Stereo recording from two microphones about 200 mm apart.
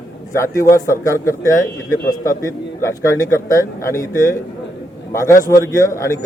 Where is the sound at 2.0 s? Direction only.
45° left (ahead or behind).